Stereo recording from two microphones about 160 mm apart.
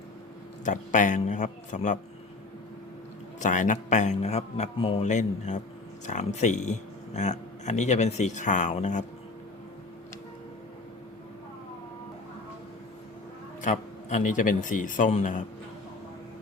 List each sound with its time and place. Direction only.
0.6 s speech: 50° left (ahead or behind)
3.4 s speech: 50° left (ahead or behind)
13.6 s speech: 50° left (ahead or behind)